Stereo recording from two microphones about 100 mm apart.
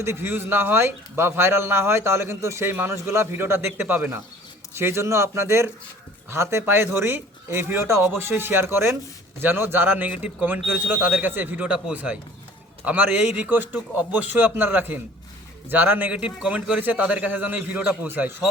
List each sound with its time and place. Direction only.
0.0 s speech: 25° right (ahead or behind)